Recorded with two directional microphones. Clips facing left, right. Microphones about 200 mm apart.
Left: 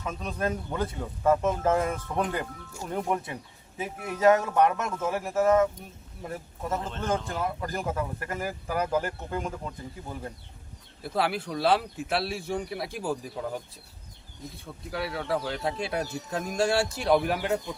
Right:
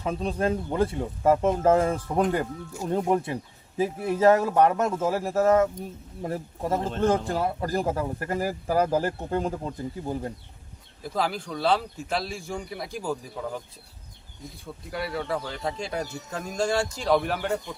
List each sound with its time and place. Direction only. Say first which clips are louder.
0.0 s speech: right 5 dB; 30° right (ahead or behind)
11.0 s a man's voice: even; 5° left (ahead or behind)
14.6 s a man's voice: right 1 dB; centre (ahead or behind)